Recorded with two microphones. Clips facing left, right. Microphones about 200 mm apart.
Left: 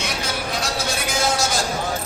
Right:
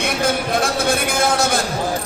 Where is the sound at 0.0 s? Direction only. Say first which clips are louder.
Right 7 dB; 55° right (ahead or behind).